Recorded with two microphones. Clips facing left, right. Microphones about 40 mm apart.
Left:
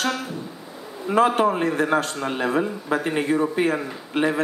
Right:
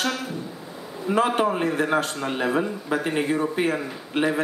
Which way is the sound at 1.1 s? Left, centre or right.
Centre.